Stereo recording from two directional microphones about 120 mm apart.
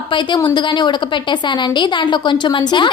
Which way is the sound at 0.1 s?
40° left (ahead or behind).